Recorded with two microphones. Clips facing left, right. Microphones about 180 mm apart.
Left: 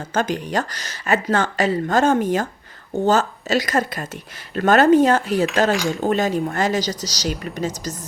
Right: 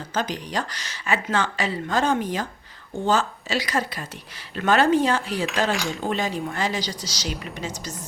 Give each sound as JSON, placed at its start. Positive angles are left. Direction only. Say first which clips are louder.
{"t": 0.1, "sound": "speech", "louder": "left 6 dB", "side_deg": 50}
{"t": 5.7, "sound": "speech", "louder": "left 6 dB", "side_deg": 0}
{"t": 6.0, "sound": "speech", "louder": "left 6 dB", "side_deg": 45}